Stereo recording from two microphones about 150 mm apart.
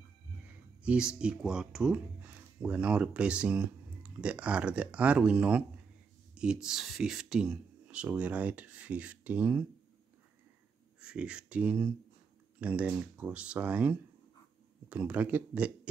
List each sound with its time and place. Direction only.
1.2 s speech: 5° right (ahead or behind)
11.0 s speech: 5° right (ahead or behind)